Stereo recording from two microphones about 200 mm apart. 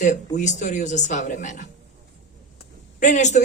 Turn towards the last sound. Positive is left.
turn(degrees=35)  # may be behind; listen again after turning